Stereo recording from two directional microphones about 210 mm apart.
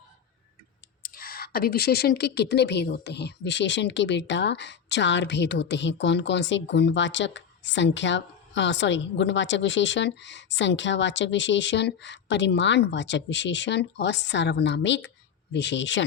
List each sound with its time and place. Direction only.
1.0 s speech: 45° left (ahead or behind); by 16.0 s 60° left (ahead or behind)